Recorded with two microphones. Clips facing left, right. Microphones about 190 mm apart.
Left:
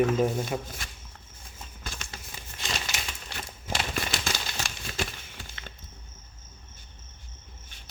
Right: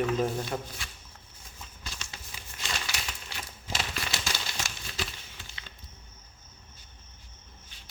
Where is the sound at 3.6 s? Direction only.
50° left (ahead or behind).